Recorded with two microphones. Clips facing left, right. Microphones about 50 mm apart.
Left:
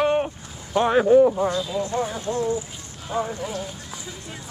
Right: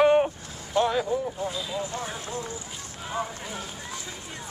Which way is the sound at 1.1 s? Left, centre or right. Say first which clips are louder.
Left 13 dB; left.